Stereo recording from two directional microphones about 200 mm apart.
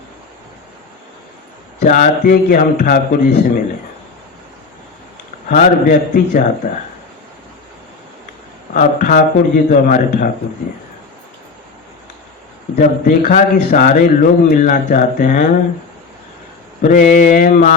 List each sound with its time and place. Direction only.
1.8 s a man's voice: 40° left (ahead or behind)
5.5 s a man's voice: 40° left (ahead or behind)
8.7 s a man's voice: 40° left (ahead or behind)
12.7 s a man's voice: 40° left (ahead or behind)
16.8 s a man's voice: 40° left (ahead or behind)